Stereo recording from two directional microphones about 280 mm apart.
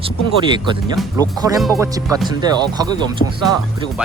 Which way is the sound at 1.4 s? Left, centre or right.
Centre.